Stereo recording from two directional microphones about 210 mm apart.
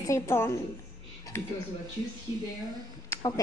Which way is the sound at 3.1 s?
20° left (ahead or behind).